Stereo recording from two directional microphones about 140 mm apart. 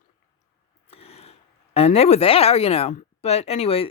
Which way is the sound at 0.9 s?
45° left (ahead or behind).